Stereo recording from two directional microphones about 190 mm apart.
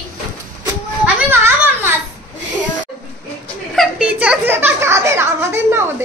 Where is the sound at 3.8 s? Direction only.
5° right (ahead or behind).